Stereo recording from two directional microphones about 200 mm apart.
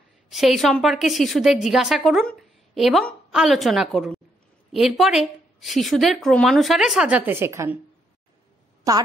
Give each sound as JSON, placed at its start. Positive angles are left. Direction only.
{"t": 0.3, "sound": "a woman's voice", "side_deg": 0}
{"t": 8.9, "sound": "a woman's voice", "side_deg": -15}